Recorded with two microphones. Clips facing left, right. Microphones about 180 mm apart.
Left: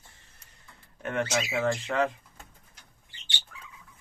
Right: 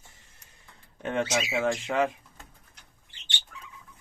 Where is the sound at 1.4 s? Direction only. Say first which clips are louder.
Right 1 dB; 10° right (ahead or behind).